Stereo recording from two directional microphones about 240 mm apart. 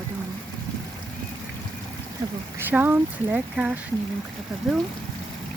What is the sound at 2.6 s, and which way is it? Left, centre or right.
Speech, centre.